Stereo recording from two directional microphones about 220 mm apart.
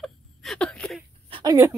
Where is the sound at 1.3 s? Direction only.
20° right (ahead or behind).